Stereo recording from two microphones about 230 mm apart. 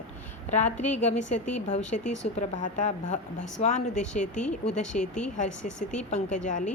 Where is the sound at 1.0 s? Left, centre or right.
Left.